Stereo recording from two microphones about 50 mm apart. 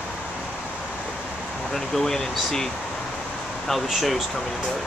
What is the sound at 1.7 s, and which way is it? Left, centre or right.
Speech, centre.